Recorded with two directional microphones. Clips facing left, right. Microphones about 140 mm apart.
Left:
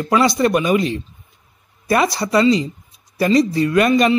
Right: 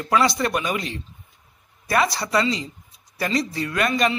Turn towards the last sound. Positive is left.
turn(degrees=15)  # may be behind; listen again after turning